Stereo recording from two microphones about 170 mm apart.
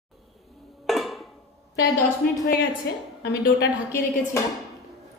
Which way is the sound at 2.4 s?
60° left (ahead or behind).